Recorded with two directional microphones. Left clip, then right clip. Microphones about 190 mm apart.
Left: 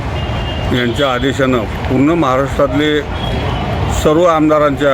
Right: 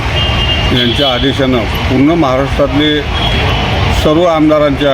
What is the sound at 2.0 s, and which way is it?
Speech, 25° left (ahead or behind).